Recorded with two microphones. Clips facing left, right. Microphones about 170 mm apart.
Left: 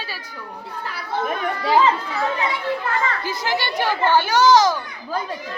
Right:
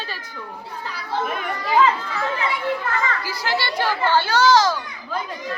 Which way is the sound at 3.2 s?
20° left (ahead or behind).